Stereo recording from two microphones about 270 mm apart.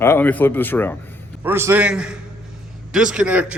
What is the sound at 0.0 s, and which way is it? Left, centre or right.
Speech, centre.